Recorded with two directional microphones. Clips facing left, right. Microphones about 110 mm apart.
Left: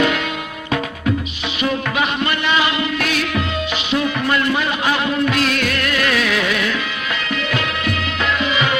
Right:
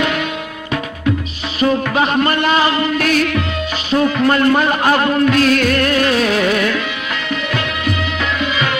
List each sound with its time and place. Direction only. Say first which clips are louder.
1.6 s music: right 5 dB; 40° right (ahead or behind)